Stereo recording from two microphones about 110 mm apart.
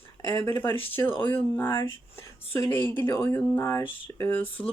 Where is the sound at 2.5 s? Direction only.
20° left (ahead or behind).